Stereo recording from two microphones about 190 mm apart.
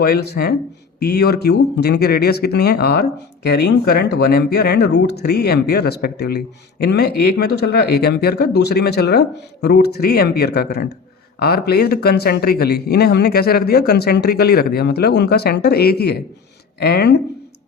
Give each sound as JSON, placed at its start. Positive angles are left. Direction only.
{"t": 0.0, "sound": "speech", "side_deg": 55}